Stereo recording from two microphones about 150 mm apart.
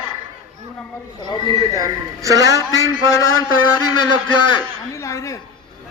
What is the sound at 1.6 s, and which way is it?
A man's voice, 25° right (ahead or behind).